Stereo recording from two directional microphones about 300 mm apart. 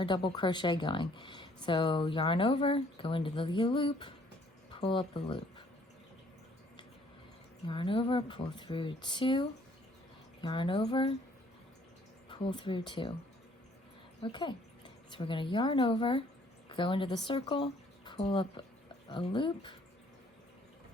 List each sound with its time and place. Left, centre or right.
0.0 s speech: centre
7.7 s speech: centre
12.3 s speech: centre
15.1 s speech: centre